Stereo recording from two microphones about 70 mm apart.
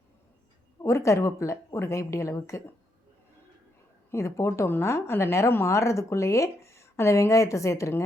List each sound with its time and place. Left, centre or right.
0.8 s a woman's voice: left
4.1 s a woman's voice: left